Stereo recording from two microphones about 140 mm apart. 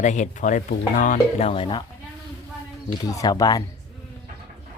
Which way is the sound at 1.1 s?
45° left (ahead or behind).